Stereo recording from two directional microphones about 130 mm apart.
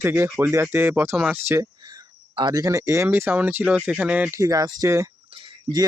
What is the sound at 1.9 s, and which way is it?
Speech, 35° right (ahead or behind).